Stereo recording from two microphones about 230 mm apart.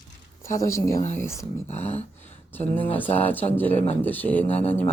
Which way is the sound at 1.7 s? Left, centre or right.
Left.